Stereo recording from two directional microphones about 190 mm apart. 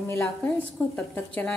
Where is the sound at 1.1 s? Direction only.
15° left (ahead or behind).